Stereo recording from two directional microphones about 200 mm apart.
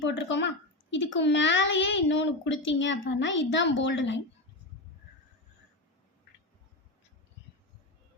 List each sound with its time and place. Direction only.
0.0 s a child's voice: 65° left (ahead or behind)